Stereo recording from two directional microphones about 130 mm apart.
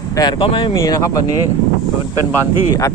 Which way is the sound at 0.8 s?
25° left (ahead or behind).